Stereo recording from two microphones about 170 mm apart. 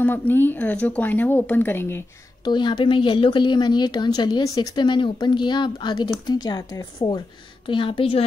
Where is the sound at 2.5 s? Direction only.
25° left (ahead or behind).